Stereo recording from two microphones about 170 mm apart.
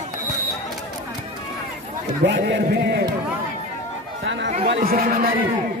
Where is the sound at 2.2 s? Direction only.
90° right.